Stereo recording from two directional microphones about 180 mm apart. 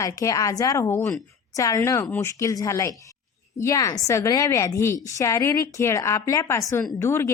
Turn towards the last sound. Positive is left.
turn(degrees=15)  # may be behind; listen again after turning